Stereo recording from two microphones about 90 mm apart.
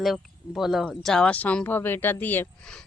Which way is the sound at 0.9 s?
10° left (ahead or behind).